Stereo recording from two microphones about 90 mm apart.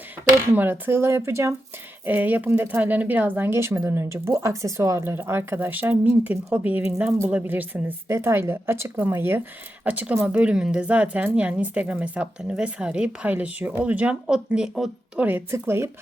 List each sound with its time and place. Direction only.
0.5 s speech: 25° right (ahead or behind)
2.0 s a woman's voice: 20° right (ahead or behind)